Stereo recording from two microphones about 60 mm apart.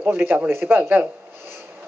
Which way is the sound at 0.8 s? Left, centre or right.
Right.